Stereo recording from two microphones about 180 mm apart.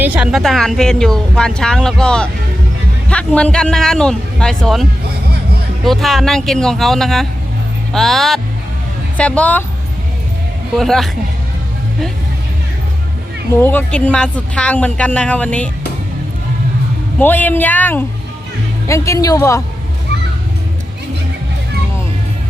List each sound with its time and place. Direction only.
0.0 s speech: 5° right (ahead or behind)
10.8 s speech: centre (ahead or behind)
13.6 s speech: 10° left (ahead or behind)
17.2 s speech: 10° left (ahead or behind)